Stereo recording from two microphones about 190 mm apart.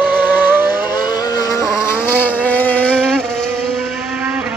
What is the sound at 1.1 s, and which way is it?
Vehicle, 20° left (ahead or behind).